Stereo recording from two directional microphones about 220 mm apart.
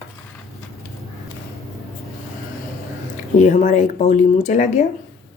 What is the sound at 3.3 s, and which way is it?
Speech, 35° left (ahead or behind).